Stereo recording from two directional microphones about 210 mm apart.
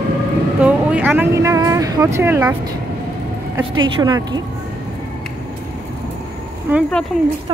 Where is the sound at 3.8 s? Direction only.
20° right (ahead or behind).